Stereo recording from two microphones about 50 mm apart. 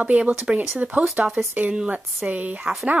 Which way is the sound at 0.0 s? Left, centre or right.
Right.